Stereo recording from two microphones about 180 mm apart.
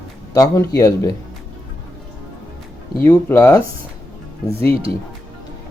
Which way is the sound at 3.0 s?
15° left (ahead or behind).